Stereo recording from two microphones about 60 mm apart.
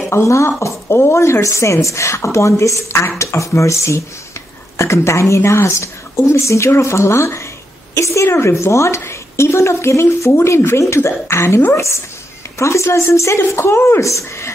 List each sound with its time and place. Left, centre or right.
0.1 s a woman's voice: left